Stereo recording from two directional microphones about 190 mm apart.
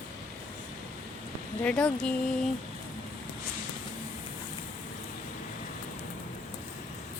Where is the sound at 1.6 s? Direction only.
5° left (ahead or behind).